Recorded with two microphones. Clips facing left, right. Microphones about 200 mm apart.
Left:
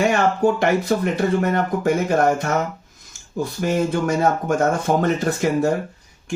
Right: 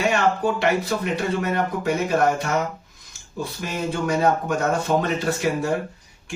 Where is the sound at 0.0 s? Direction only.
45° left (ahead or behind).